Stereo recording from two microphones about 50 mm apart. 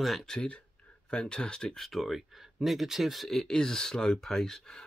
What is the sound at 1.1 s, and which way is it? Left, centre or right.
Speech, centre.